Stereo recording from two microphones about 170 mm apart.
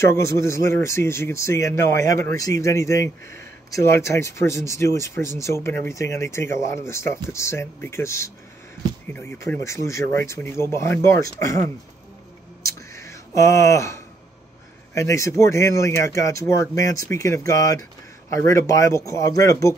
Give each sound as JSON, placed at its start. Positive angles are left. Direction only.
{"t": 0.0, "sound": "speech", "side_deg": 15}
{"t": 12.6, "sound": "a sound", "side_deg": 15}
{"t": 15.0, "sound": "speech", "side_deg": 15}